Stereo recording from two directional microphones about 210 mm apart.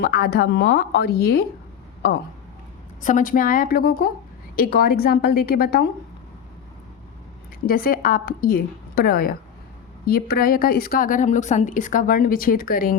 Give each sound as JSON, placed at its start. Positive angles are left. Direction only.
{"t": 0.0, "sound": "a woman's voice", "side_deg": 45}
{"t": 3.0, "sound": "a woman's voice", "side_deg": 40}
{"t": 7.7, "sound": "a woman's voice", "side_deg": 45}